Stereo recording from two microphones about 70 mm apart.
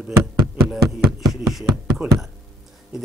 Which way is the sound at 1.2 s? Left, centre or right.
Centre.